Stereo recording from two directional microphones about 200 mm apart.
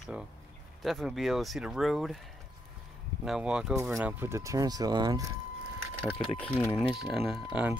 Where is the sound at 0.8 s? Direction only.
Centre (ahead or behind).